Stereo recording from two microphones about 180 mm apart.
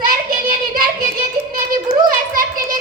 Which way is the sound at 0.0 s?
50° right (ahead or behind).